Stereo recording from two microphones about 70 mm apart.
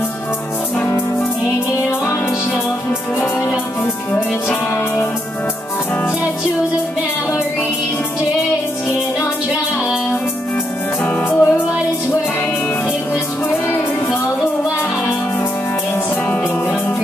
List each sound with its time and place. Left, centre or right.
3.2 s music: left
11.2 s music: left
13.5 s music: left